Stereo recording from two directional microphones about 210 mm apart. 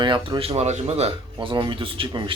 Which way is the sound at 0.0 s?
25° right (ahead or behind).